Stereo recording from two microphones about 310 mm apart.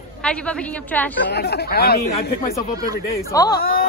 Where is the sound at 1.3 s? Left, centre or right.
Left.